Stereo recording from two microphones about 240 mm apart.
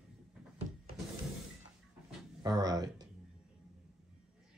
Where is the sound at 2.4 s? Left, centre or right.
Centre.